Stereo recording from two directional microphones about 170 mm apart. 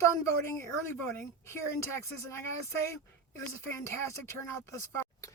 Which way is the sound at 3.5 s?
15° left (ahead or behind).